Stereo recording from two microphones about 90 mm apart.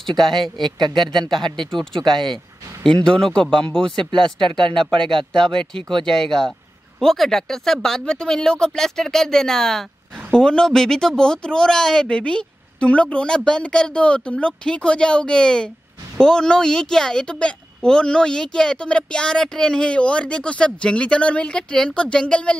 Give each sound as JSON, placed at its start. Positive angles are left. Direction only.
{"t": 0.3, "sound": "speech", "side_deg": -55}
{"t": 2.8, "sound": "a woman's voice", "side_deg": 10}